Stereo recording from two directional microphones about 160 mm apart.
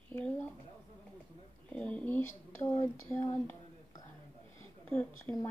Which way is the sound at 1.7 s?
10° left (ahead or behind).